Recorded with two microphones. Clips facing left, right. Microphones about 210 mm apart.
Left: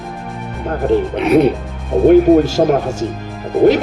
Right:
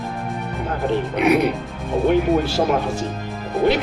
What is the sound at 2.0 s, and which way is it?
Speech, 45° left (ahead or behind).